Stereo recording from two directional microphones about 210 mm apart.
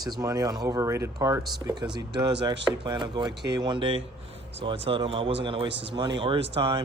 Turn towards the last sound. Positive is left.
turn(degrees=-25)  # may be behind; listen again after turning